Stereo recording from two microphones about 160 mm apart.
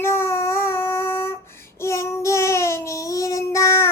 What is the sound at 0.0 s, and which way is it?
Child singing, 15° left (ahead or behind).